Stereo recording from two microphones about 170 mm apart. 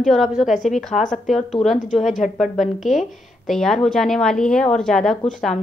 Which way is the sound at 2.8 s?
Centre (ahead or behind).